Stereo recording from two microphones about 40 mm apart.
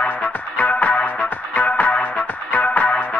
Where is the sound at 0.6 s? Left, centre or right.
Left.